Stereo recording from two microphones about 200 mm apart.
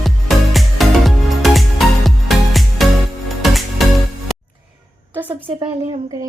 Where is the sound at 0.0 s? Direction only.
Centre (ahead or behind).